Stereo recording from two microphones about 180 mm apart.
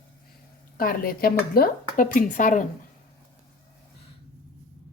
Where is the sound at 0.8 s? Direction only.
55° left (ahead or behind).